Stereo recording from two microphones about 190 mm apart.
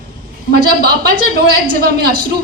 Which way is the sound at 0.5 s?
55° right (ahead or behind).